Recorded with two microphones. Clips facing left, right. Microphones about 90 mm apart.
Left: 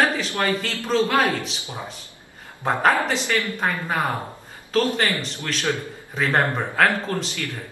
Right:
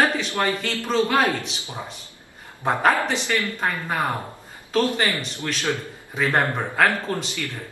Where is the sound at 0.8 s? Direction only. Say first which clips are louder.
Even; centre (ahead or behind).